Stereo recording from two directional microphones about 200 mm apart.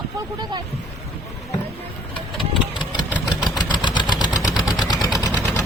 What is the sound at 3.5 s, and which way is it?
Engine, 20° left (ahead or behind).